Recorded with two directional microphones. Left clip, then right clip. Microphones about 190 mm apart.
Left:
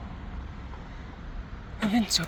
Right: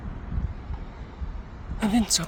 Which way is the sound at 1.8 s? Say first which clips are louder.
Right 2 dB; 15° right (ahead or behind).